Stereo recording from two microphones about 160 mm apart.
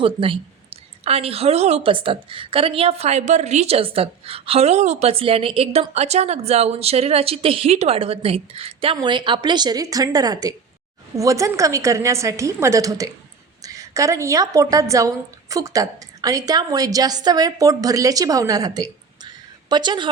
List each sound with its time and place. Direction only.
0.0 s a woman's voice: 35° right (ahead or behind)